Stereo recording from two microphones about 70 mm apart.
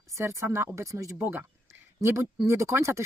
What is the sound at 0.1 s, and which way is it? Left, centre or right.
Speech, right.